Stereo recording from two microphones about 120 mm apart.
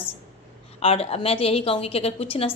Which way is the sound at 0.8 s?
55° left (ahead or behind).